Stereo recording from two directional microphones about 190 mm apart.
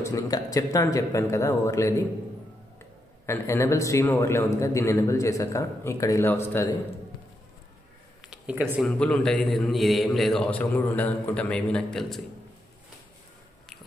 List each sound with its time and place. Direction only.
0.0 s a man's voice: 20° left (ahead or behind)
3.3 s a man's voice: 15° left (ahead or behind)
8.3 s speech: 5° right (ahead or behind)
8.8 s a man's voice: 5° left (ahead or behind)